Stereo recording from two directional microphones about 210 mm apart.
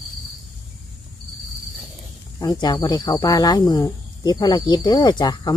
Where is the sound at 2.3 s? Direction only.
20° left (ahead or behind).